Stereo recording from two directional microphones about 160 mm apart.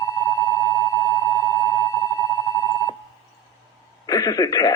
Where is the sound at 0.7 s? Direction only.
20° left (ahead or behind).